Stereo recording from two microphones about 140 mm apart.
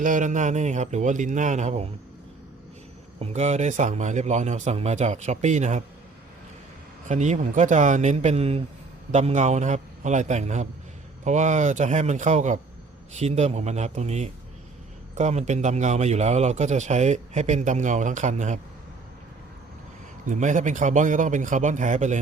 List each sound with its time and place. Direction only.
0.0 s a man's voice: 65° right (ahead or behind)
3.2 s a man's voice: 55° right (ahead or behind)
7.1 s a man's voice: 60° right (ahead or behind)
20.2 s a man's voice: 65° right (ahead or behind)